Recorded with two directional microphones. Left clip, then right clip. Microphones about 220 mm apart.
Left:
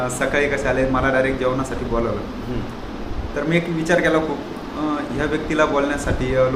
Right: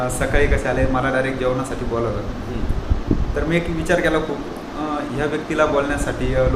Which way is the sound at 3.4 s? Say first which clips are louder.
Left 1 dB; 10° right (ahead or behind).